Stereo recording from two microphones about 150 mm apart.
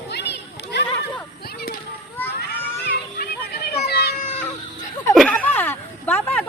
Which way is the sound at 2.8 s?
90° left.